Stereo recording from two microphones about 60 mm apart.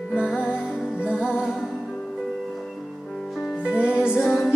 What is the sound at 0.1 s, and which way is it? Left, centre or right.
Music, centre.